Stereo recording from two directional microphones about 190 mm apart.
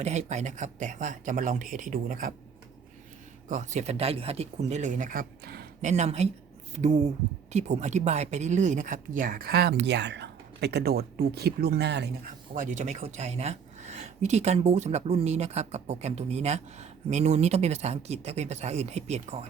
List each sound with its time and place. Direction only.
0.0 s speech: 35° right (ahead or behind)
3.5 s speech: 40° right (ahead or behind)
5.8 s speech: 35° right (ahead or behind); by 12.1 s 65° right (ahead or behind)
12.5 s speech: 40° right (ahead or behind)